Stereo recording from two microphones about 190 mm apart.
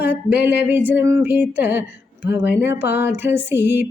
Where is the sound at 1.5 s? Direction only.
10° right (ahead or behind).